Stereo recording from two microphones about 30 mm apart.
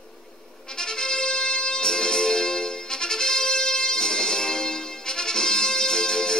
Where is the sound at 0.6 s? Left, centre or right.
Left.